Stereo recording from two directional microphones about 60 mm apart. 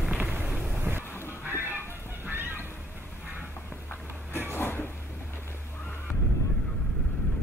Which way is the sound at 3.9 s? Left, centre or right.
Left.